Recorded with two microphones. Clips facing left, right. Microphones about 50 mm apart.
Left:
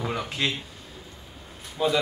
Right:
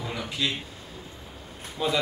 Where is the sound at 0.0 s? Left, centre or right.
Left.